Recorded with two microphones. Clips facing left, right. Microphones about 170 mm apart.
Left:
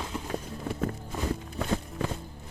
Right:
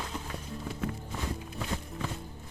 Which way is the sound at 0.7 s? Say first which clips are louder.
Left 5 dB; 45° left (ahead or behind).